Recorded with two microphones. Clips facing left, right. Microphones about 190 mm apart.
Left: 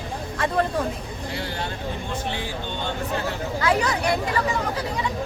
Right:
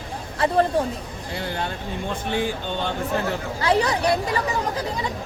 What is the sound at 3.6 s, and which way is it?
Speech, 35° right (ahead or behind).